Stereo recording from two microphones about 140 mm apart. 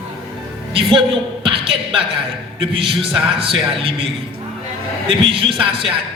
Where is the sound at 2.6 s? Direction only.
40° right (ahead or behind).